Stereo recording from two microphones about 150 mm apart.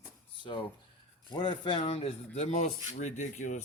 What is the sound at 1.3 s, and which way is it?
Speech, 30° left (ahead or behind).